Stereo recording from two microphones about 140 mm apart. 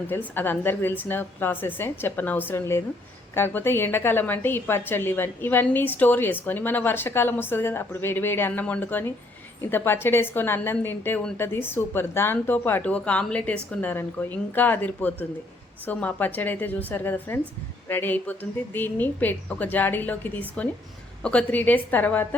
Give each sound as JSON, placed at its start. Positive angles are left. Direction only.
{"t": 0.1, "sound": "speech", "side_deg": 15}